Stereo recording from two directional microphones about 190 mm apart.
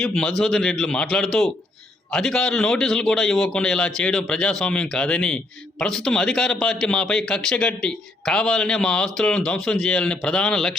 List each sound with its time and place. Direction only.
0.0 s a man's voice: 5° left (ahead or behind)